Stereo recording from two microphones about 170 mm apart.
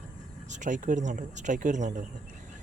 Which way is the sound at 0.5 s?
45° right (ahead or behind).